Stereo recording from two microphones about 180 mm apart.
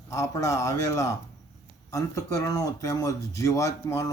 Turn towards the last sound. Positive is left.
turn(degrees=15)  # may be behind; listen again after turning